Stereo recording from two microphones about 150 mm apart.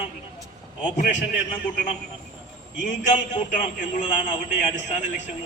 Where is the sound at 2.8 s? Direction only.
55° left (ahead or behind).